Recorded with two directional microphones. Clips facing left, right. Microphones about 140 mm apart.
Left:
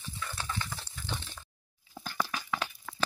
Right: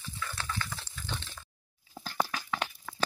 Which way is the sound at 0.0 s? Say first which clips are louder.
Even; 20° left (ahead or behind).